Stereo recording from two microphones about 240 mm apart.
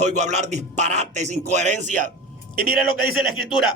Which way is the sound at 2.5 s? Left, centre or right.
Left.